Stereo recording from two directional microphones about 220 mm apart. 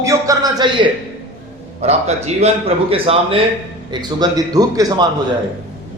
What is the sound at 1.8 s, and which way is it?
A man's voice, 30° right (ahead or behind).